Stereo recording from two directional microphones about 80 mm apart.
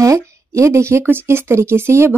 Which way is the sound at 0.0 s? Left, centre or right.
Right.